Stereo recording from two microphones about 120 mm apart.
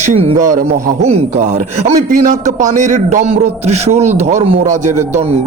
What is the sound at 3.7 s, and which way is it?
Speech, 65° right (ahead or behind).